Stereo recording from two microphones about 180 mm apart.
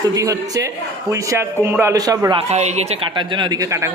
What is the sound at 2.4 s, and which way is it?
A man's voice, 35° right (ahead or behind).